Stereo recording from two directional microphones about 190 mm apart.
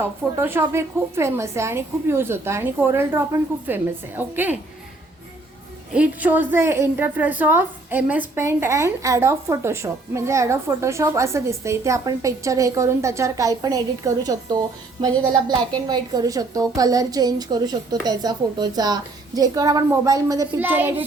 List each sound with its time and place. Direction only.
0.0 s a woman's voice: 10° right (ahead or behind)
5.9 s a woman's voice: 5° right (ahead or behind)